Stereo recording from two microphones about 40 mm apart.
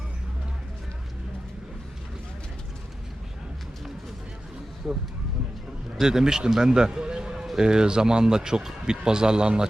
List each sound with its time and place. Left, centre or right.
4.8 s speech: right
6.0 s a man's voice: centre